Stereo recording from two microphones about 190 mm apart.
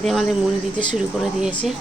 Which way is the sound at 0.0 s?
Centre (ahead or behind).